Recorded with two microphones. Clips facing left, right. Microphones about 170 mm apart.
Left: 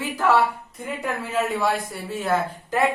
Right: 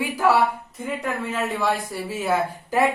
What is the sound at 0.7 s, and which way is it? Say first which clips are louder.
Speech: right 1 dB; centre (ahead or behind).